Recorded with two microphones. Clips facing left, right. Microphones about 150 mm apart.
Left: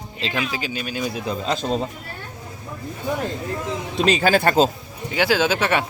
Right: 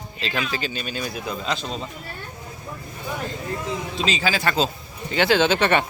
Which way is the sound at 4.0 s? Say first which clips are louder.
Left 8 dB; 55° left (ahead or behind).